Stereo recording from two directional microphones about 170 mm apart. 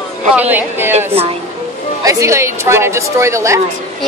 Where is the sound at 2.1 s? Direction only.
20° right (ahead or behind).